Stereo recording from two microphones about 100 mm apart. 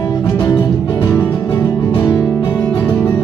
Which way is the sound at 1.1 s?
15° left (ahead or behind).